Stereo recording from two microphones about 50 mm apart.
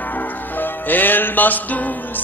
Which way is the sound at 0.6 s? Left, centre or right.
Left.